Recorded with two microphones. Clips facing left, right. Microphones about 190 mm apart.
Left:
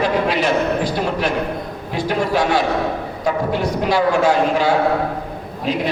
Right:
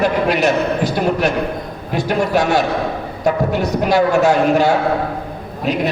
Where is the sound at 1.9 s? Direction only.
45° right (ahead or behind).